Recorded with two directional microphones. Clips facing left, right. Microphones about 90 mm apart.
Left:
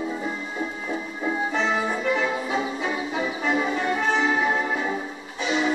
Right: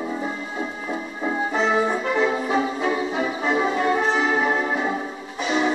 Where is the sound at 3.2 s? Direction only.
30° right (ahead or behind).